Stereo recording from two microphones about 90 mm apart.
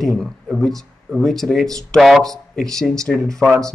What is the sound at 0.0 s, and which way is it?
Speech, centre (ahead or behind).